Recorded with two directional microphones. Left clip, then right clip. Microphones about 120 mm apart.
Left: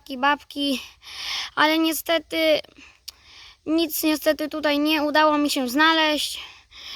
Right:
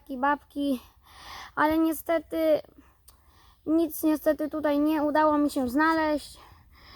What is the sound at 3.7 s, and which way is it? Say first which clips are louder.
Speech: left 3 dB; 15° left (ahead or behind).